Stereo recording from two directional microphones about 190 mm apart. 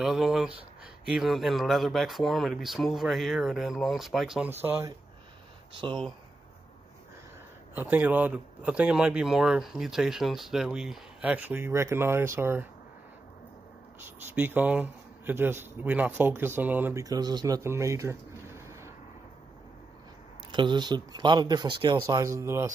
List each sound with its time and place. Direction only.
0.0 s speech: centre (ahead or behind)
5.9 s speech: 5° left (ahead or behind)
7.7 s speech: 10° right (ahead or behind)
14.3 s speech: 10° right (ahead or behind)
20.5 s speech: 25° right (ahead or behind)